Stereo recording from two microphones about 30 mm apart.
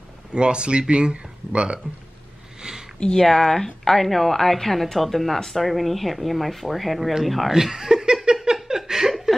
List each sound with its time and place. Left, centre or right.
0.3 s speech: right
2.6 s a sound: right
3.2 s speech: centre
7.7 s laughter: centre